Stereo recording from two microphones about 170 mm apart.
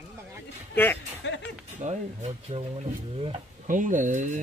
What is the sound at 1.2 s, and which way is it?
Speech, 90° left.